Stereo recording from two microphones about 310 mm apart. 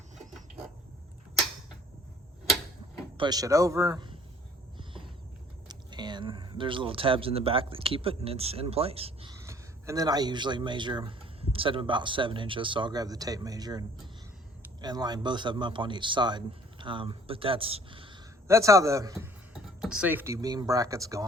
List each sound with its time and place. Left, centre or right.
0.2 s a sound: centre
3.2 s speech: centre
5.6 s speech: centre